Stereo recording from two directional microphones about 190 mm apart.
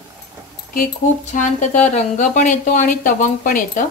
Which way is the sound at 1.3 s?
40° left (ahead or behind).